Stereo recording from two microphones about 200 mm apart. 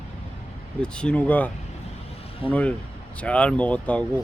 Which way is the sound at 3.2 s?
5° left (ahead or behind).